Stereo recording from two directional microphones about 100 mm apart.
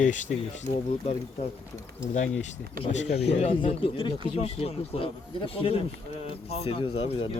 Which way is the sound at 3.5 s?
65° left (ahead or behind).